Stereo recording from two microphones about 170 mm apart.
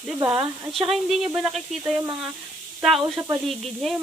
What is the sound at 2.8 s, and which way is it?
Speech, centre (ahead or behind).